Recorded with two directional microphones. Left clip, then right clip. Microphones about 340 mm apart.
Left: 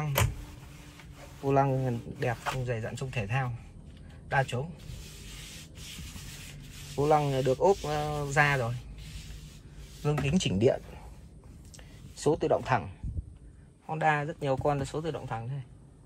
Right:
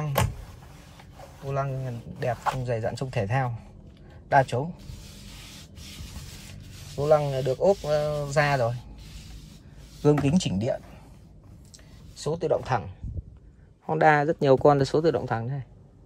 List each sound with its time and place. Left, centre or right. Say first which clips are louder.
1.5 s speech: left 4 dB; centre
7.0 s speech: right 3 dB; centre
10.0 s speech: right 8 dB; centre
12.2 s speech: right 1 dB; centre
13.8 s a man's voice: right 8 dB; right